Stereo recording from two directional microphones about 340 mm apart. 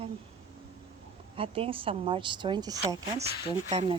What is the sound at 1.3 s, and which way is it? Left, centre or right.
Speech, centre.